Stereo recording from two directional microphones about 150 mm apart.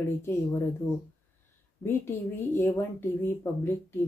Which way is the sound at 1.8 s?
15° left (ahead or behind).